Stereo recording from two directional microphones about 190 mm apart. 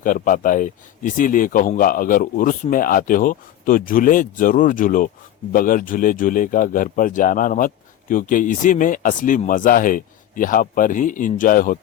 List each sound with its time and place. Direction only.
0.0 s a man's voice: 45° left (ahead or behind)